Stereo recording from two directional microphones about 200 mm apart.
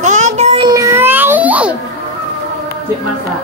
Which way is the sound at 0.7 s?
15° right (ahead or behind).